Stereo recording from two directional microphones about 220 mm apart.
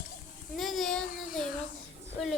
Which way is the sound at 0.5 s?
Centre (ahead or behind).